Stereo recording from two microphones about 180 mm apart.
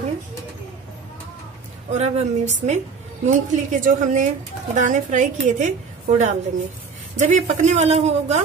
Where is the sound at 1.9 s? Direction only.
40° right (ahead or behind).